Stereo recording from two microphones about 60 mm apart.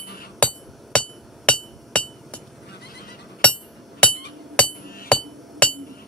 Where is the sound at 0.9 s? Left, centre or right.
Centre.